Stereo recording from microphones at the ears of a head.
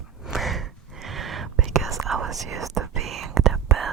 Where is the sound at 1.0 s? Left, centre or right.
Right.